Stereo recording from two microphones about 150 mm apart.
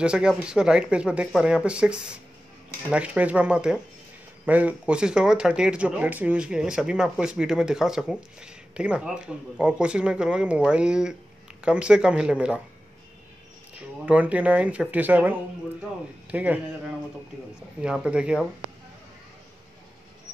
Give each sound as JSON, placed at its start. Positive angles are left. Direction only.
{"t": 0.0, "sound": "speech", "side_deg": -5}
{"t": 13.7, "sound": "speech", "side_deg": -10}
{"t": 17.8, "sound": "speech", "side_deg": -5}